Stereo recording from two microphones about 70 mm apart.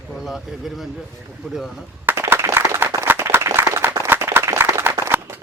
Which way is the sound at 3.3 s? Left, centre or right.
Right.